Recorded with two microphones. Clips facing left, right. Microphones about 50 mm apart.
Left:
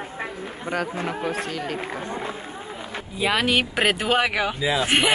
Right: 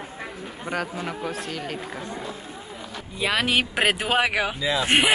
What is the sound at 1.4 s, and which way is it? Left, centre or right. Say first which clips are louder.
Speech: left 3 dB; centre.